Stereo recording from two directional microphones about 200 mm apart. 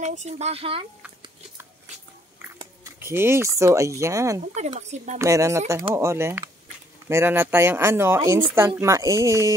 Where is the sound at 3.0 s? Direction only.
10° right (ahead or behind).